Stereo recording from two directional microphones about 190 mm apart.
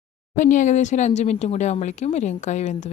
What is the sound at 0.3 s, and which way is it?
Speech, 40° left (ahead or behind).